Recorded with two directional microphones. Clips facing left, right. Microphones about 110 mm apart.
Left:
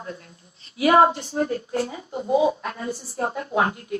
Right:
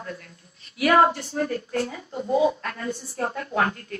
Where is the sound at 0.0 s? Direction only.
20° left (ahead or behind).